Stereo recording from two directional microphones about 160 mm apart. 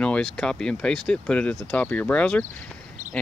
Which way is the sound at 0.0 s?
5° left (ahead or behind).